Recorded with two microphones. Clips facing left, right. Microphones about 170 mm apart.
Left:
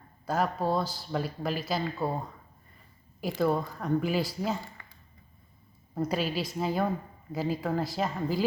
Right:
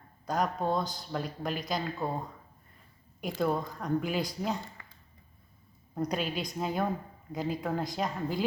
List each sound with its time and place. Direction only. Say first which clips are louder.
0.3 s speech: left 2 dB; 5° left (ahead or behind)
3.4 s speech: left 3 dB; 5° left (ahead or behind)
5.9 s speech: left 2 dB; 5° left (ahead or behind)